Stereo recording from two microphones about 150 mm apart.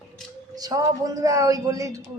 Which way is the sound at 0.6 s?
25° right (ahead or behind).